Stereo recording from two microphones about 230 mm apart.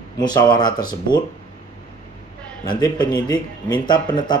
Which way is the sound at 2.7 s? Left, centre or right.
Centre.